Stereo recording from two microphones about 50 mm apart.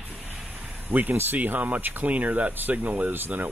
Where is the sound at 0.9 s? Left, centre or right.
Right.